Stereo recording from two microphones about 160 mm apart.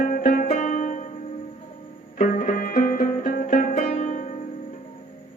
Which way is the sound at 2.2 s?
55° left (ahead or behind).